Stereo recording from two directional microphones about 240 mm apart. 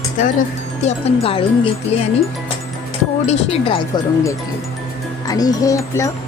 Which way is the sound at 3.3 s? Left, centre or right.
Left.